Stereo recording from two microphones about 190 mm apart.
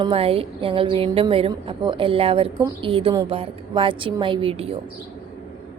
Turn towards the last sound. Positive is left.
turn(degrees=-30)  # may be behind; listen again after turning